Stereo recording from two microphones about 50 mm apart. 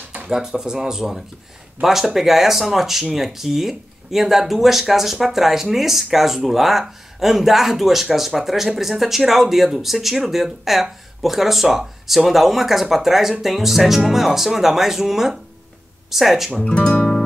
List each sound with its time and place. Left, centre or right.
0.3 s speech: centre
16.6 s speech: left